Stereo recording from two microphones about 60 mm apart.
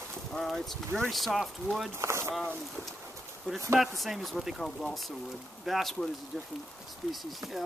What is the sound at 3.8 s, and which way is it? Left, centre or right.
Speech, centre.